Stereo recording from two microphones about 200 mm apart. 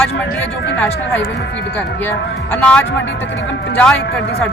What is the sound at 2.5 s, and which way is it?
Speech, 10° left (ahead or behind).